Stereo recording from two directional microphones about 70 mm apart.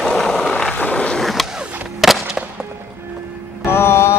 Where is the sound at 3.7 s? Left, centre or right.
Left.